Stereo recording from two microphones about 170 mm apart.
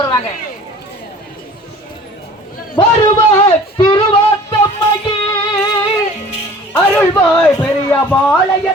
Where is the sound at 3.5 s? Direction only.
30° left (ahead or behind).